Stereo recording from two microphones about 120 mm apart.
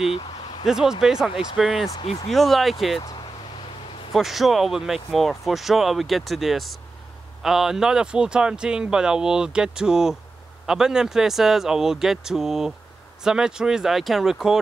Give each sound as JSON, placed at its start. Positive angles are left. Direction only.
{"t": 0.1, "sound": "a sound", "side_deg": 40}
{"t": 0.7, "sound": "speech", "side_deg": -5}
{"t": 4.1, "sound": "speech", "side_deg": 0}